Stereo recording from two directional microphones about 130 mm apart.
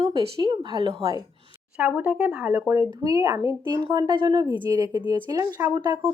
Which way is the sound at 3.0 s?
25° right (ahead or behind).